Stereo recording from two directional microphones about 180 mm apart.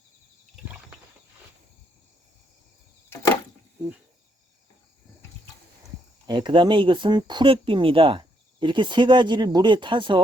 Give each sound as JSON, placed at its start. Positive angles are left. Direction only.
{"t": 6.2, "sound": "speech", "side_deg": -25}